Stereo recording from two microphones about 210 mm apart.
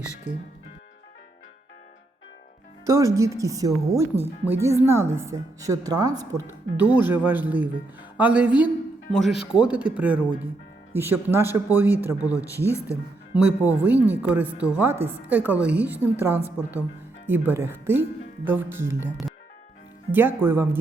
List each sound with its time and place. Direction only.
0.3 s speech: 35° left (ahead or behind)
2.8 s speech: 15° right (ahead or behind)
12.6 s speech: 15° left (ahead or behind)
13.3 s speech: 5° right (ahead or behind)